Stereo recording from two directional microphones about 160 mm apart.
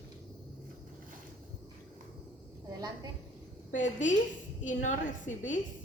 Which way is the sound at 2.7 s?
25° right (ahead or behind).